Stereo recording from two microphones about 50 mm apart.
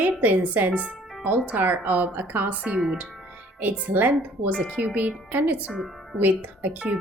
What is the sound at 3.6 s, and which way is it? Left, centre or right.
Speech, right.